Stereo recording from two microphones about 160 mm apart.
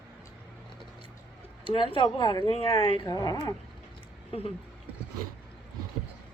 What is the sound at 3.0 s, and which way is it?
Speech, 20° left (ahead or behind).